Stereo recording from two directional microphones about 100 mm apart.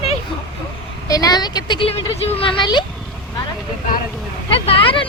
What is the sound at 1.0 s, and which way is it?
Speech, 40° left (ahead or behind).